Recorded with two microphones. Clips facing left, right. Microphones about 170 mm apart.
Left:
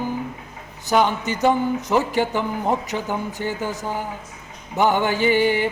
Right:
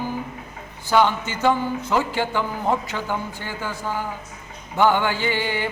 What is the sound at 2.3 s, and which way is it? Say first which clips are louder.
Speech: left 1 dB; 20° left (ahead or behind).